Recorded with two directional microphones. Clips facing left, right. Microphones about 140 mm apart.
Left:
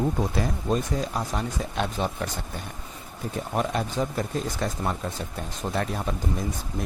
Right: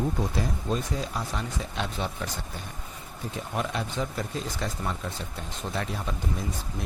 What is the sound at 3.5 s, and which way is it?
Speech, 45° left (ahead or behind).